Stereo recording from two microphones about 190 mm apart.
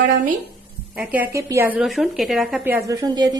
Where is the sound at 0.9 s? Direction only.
10° right (ahead or behind).